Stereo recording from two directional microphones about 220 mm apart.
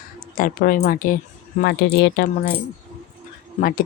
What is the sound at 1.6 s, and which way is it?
Speech, 50° left (ahead or behind).